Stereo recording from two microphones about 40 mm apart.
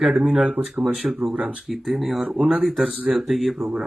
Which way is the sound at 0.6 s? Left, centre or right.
Right.